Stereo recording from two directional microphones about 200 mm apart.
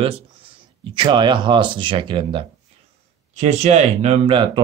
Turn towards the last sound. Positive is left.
turn(degrees=-25)  # may be behind; listen again after turning